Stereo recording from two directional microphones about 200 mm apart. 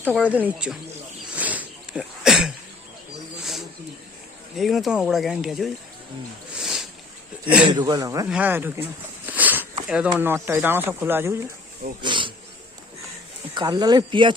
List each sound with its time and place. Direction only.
0.1 s speech: 5° right (ahead or behind)
1.4 s a sound: 5° right (ahead or behind)
4.5 s speech: centre (ahead or behind)
6.6 s a sound: centre (ahead or behind)
7.7 s speech: 20° right (ahead or behind)
9.2 s a sound: 10° right (ahead or behind)
9.9 s speech: 10° right (ahead or behind)
12.0 s bee: 25° right (ahead or behind)
13.5 s speech: 20° right (ahead or behind)